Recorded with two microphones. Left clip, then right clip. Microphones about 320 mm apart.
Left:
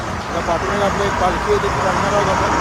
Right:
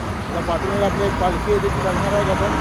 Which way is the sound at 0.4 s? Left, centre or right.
Left.